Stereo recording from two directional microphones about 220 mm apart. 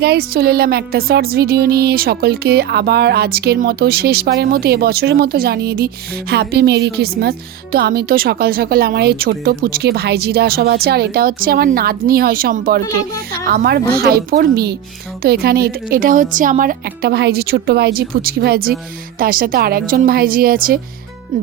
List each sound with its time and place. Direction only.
0.0 s music: 45° right (ahead or behind)
19.2 s a woman's voice: 40° right (ahead or behind)